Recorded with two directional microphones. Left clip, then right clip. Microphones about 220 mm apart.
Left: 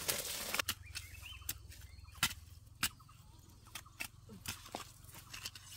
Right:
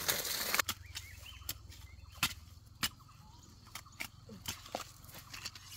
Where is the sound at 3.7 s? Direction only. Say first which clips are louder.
Right 1 dB; 5° left (ahead or behind).